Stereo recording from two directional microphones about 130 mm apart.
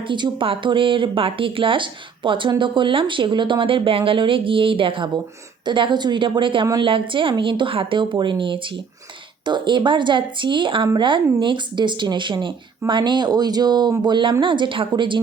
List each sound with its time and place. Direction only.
0.1 s speech: 40° right (ahead or behind)